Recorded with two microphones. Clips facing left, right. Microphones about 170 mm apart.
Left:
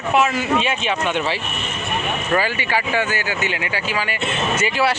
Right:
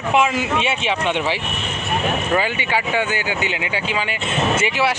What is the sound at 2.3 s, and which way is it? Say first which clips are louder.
Speech: even; 20° right (ahead or behind).